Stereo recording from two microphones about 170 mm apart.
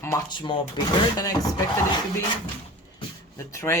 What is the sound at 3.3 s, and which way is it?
Speech, 15° left (ahead or behind).